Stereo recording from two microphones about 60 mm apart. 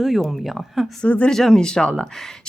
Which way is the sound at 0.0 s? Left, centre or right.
Centre.